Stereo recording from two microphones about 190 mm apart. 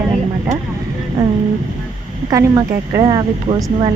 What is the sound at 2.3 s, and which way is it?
A woman's voice, 15° right (ahead or behind).